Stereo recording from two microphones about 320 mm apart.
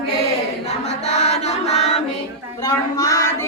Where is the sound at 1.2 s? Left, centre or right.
Centre.